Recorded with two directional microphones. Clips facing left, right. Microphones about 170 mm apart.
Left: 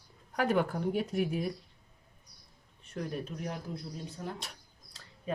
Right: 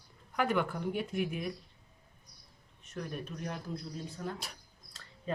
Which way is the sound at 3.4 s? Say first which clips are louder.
Left 1 dB; 15° left (ahead or behind).